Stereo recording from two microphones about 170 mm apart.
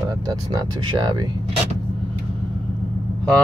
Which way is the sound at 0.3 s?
25° right (ahead or behind).